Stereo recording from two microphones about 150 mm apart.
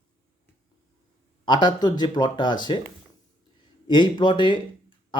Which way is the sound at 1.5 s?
30° left (ahead or behind).